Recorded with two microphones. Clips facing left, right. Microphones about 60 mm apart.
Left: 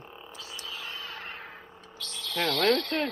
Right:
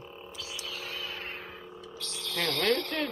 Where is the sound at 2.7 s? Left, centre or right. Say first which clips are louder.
Left 3 dB; left.